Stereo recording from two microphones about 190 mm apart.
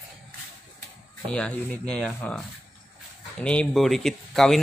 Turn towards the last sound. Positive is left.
turn(degrees=0)  # may be behind; listen again after turning